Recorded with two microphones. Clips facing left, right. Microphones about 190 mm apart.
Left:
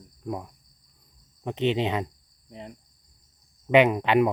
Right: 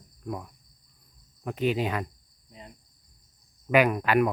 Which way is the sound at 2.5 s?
70° left (ahead or behind).